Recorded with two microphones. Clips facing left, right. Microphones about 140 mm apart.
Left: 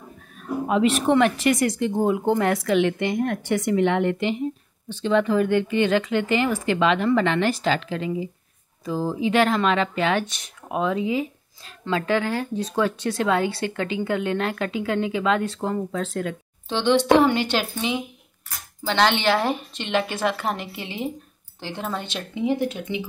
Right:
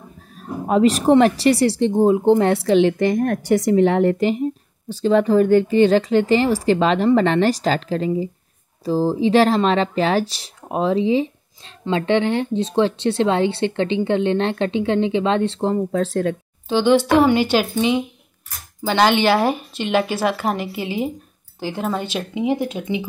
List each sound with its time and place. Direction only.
0.4 s speech: 40° right (ahead or behind)
16.6 s a woman's voice: 5° right (ahead or behind)